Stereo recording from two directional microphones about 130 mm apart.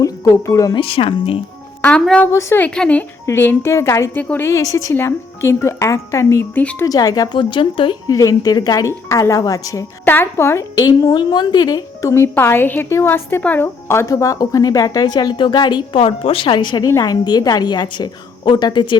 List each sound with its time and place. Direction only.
0.0 s speech: 25° left (ahead or behind)
0.8 s speech: 45° left (ahead or behind)
1.8 s a woman's voice: 10° left (ahead or behind)
2.3 s speech: 20° left (ahead or behind)
2.6 s a woman's voice: 10° left (ahead or behind)
6.6 s a woman's voice: 10° left (ahead or behind)
6.8 s speech: 30° left (ahead or behind)
7.3 s speech: 40° left (ahead or behind); by 11.2 s 25° left (ahead or behind)
11.2 s a woman's voice: 35° left (ahead or behind)